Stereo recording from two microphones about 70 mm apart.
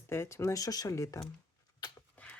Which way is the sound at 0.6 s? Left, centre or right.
Left.